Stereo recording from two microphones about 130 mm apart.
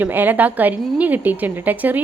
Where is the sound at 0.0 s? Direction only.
15° right (ahead or behind).